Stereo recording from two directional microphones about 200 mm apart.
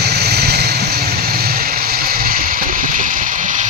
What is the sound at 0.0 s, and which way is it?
Vehicle, 55° right (ahead or behind).